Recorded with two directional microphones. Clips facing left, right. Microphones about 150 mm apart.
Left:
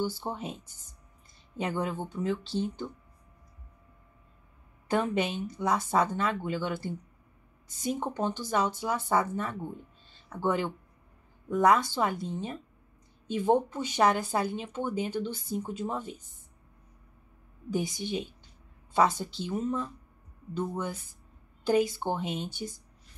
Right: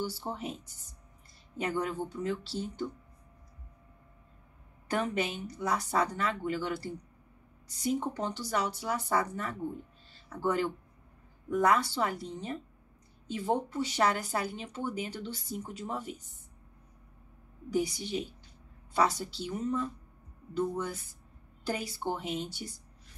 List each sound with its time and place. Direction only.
0.2 s speech: 25° left (ahead or behind)
1.6 s speech: 20° left (ahead or behind)
4.9 s speech: 20° left (ahead or behind)
17.7 s speech: 20° left (ahead or behind)